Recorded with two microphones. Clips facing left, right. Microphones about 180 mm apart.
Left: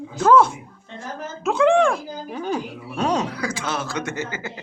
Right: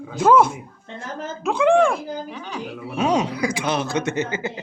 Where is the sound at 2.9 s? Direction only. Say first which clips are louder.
Right 2 dB; 10° right (ahead or behind).